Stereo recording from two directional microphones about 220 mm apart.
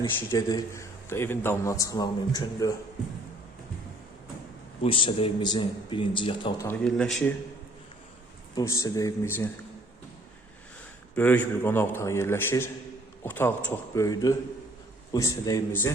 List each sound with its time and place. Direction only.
0.0 s a man's voice: 15° left (ahead or behind)
4.8 s speech: 25° left (ahead or behind)
6.7 s speech: 5° left (ahead or behind)
8.5 s a man's voice: 15° left (ahead or behind)
11.1 s a man's voice: 10° left (ahead or behind)